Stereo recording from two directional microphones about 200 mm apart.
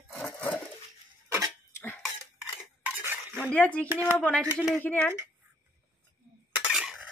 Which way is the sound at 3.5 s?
5° left (ahead or behind).